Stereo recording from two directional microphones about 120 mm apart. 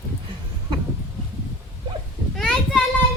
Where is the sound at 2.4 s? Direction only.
5° left (ahead or behind).